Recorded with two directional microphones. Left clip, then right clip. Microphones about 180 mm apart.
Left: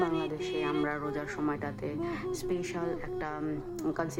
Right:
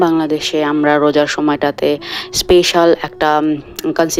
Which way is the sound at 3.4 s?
35° right (ahead or behind).